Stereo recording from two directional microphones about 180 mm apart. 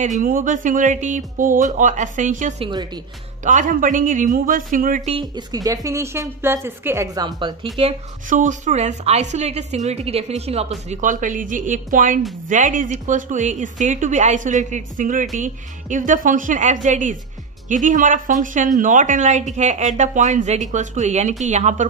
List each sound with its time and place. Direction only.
0.2 s speech: 50° right (ahead or behind)
2.6 s speech: 25° right (ahead or behind)
3.4 s speech: 45° right (ahead or behind)
5.1 s a woman's voice: 20° right (ahead or behind)
8.3 s a woman's voice: 45° right (ahead or behind)